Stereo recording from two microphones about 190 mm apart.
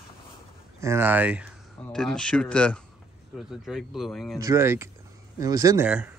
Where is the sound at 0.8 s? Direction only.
10° right (ahead or behind).